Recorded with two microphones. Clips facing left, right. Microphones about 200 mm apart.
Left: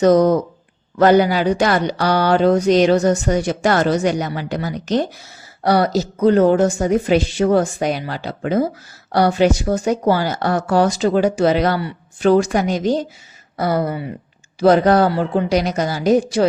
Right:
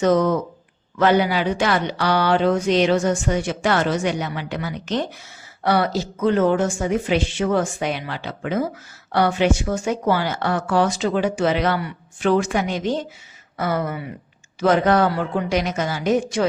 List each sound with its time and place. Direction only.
0.0 s speech: 40° left (ahead or behind)